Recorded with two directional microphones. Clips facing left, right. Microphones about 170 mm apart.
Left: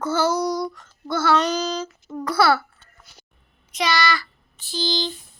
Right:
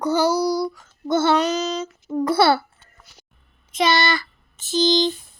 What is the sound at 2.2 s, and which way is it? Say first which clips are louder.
Speech: right 2 dB; 25° right (ahead or behind).